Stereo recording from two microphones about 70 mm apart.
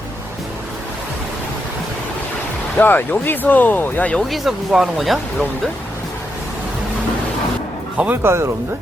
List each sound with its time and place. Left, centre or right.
2.7 s speech: left
4.3 s speech: centre
8.1 s speech: right